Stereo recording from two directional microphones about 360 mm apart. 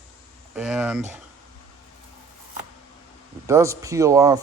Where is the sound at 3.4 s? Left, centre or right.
Centre.